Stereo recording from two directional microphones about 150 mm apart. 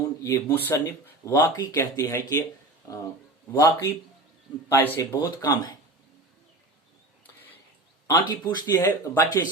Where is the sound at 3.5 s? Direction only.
20° left (ahead or behind).